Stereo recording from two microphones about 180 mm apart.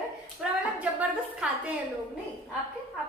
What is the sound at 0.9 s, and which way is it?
Speech, 10° right (ahead or behind).